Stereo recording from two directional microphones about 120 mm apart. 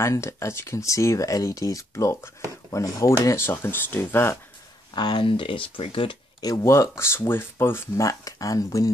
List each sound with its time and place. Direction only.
0.0 s speech: 25° left (ahead or behind)
4.9 s speech: 40° left (ahead or behind)
6.4 s speech: 25° left (ahead or behind)